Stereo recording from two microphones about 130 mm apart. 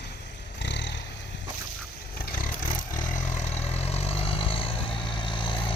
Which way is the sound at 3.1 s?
70° left (ahead or behind).